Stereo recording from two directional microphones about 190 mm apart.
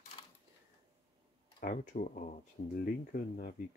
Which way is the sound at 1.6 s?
45° left (ahead or behind).